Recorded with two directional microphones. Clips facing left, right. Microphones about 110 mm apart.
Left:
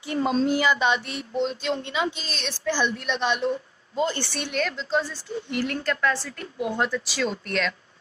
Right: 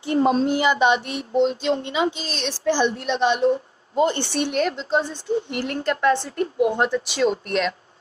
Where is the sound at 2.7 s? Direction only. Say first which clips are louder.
Right 5 dB; 40° right (ahead or behind).